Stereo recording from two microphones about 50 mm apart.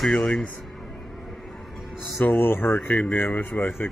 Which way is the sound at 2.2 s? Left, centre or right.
Left.